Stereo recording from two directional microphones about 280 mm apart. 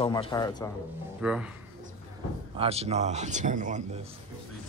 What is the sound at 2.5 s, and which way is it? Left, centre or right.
Speech, right.